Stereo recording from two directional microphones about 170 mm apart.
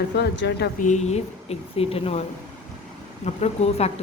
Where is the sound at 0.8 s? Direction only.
45° left (ahead or behind).